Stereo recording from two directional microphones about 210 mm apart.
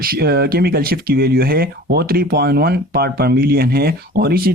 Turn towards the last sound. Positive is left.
turn(degrees=-45)  # may be behind; listen again after turning